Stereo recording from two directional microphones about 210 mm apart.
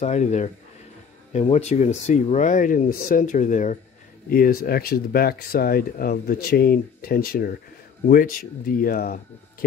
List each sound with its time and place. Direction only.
0.0 s speech: 35° left (ahead or behind)